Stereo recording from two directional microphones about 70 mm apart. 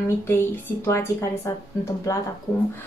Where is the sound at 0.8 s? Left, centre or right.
Left.